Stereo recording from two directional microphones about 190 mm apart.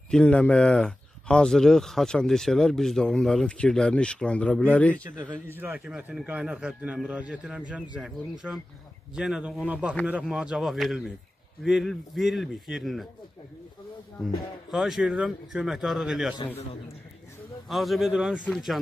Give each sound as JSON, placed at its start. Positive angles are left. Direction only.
{"t": 0.1, "sound": "speech", "side_deg": 5}
{"t": 5.2, "sound": "speech", "side_deg": -10}
{"t": 14.7, "sound": "speech", "side_deg": 0}
{"t": 17.6, "sound": "speech", "side_deg": 0}